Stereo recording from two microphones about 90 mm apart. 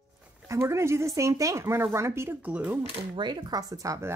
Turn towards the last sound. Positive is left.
turn(degrees=-35)  # may be behind; listen again after turning